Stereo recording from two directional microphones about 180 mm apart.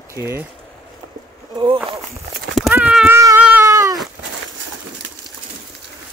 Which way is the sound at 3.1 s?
15° right (ahead or behind).